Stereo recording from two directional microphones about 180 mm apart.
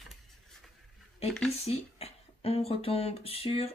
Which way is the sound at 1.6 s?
35° left (ahead or behind).